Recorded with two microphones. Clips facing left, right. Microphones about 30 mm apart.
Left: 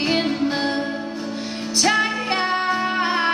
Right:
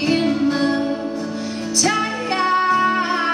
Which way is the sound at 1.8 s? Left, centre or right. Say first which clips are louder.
Left 1 dB; left.